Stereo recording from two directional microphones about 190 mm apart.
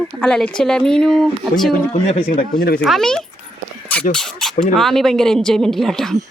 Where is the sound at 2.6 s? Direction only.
55° left (ahead or behind).